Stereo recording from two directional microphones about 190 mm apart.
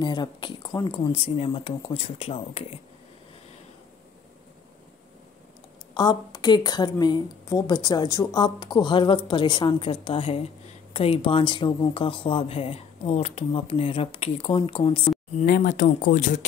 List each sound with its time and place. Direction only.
0.0 s speech: 25° left (ahead or behind)
5.9 s speech: 20° left (ahead or behind)
15.4 s speech: 50° left (ahead or behind)